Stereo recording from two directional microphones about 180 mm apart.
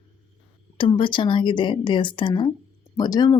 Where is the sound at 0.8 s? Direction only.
25° left (ahead or behind).